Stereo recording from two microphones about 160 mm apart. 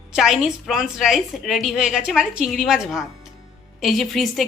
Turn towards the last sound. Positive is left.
turn(degrees=0)  # may be behind; listen again after turning